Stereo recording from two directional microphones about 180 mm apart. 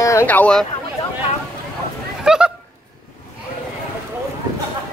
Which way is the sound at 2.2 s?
5° right (ahead or behind).